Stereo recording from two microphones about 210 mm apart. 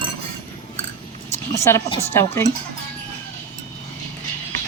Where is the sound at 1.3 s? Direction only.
15° left (ahead or behind).